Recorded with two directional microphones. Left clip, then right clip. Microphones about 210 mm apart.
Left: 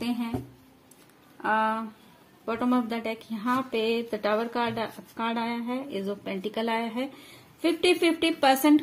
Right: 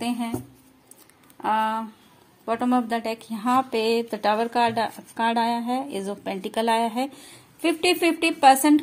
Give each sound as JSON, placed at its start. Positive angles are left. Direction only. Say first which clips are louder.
{"t": 1.4, "sound": "speech", "louder": "right 2 dB", "side_deg": -35}
{"t": 2.4, "sound": "a woman's voice", "louder": "right 4 dB", "side_deg": -25}